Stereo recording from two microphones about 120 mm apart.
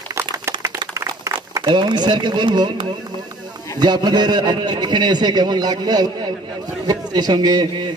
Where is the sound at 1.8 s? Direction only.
40° right (ahead or behind).